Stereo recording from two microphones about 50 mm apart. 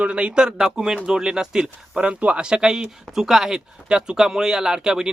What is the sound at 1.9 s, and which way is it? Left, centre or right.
Speech, right.